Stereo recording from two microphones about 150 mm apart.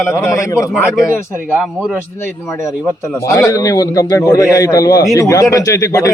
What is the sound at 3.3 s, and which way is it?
A man's voice, 20° left (ahead or behind).